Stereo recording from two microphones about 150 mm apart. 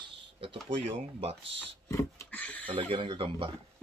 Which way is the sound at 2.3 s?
10° left (ahead or behind).